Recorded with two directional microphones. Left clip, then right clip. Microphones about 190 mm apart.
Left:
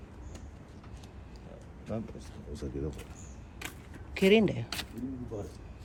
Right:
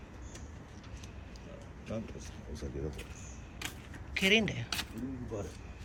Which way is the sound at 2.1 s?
50° left (ahead or behind).